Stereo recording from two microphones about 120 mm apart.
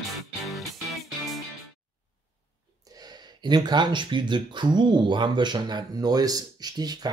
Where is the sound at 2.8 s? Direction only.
35° right (ahead or behind).